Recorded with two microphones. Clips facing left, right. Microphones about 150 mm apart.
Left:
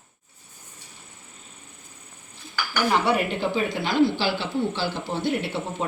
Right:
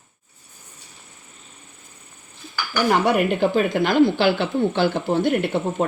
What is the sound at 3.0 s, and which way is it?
Speech, 55° right (ahead or behind).